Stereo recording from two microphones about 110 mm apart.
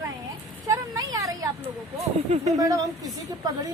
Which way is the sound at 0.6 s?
35° right (ahead or behind).